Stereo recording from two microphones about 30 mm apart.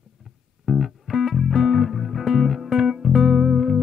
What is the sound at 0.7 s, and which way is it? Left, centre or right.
Music, centre.